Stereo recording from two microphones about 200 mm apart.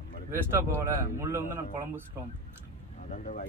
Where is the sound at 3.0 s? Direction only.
40° left (ahead or behind).